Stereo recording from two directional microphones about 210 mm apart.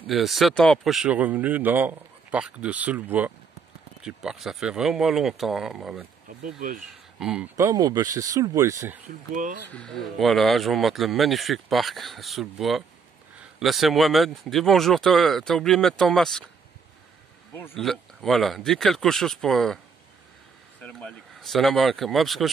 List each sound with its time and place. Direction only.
0.0 s speech: centre (ahead or behind)
6.2 s speech: 40° right (ahead or behind)
7.2 s speech: 5° right (ahead or behind)
7.5 s speech: 15° right (ahead or behind)
9.3 s speech: 40° right (ahead or behind)
9.7 s speech: 5° left (ahead or behind)
17.6 s speech: 5° left (ahead or behind)
20.8 s speech: 5° left (ahead or behind)